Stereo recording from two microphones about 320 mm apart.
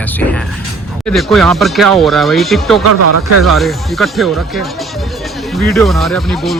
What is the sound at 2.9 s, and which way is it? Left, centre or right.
Speech, right.